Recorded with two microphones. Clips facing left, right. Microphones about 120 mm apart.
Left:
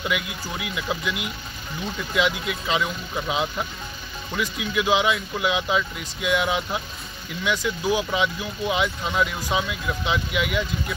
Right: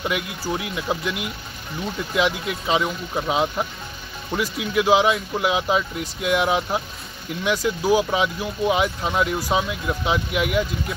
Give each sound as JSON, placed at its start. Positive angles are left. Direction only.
{"t": 0.5, "sound": "speech", "side_deg": -35}
{"t": 1.0, "sound": "speech", "side_deg": 0}
{"t": 2.6, "sound": "speech", "side_deg": -30}